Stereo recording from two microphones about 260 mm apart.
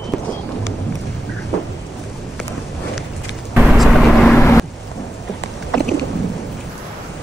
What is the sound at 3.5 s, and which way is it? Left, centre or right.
Vehicle, centre.